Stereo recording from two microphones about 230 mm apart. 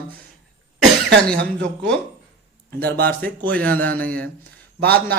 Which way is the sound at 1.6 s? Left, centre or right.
Centre.